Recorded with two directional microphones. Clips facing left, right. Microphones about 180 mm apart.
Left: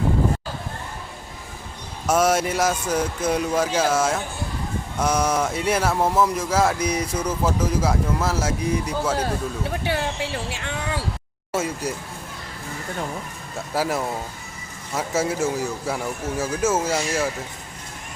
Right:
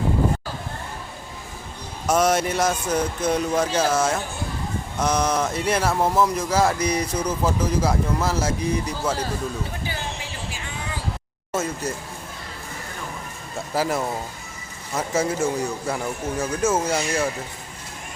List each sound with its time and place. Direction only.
2.0 s speech: 5° left (ahead or behind)
9.6 s a sound: 70° left (ahead or behind)
11.5 s speech: 10° left (ahead or behind)
13.7 s a man's voice: centre (ahead or behind)